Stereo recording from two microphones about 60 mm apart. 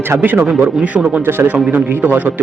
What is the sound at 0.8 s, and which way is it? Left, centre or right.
Speech, right.